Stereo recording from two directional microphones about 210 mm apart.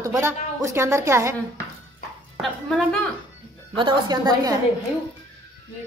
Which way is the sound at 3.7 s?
20° right (ahead or behind).